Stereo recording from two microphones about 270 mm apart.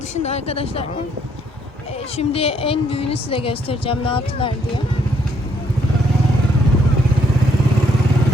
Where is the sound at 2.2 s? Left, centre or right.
Left.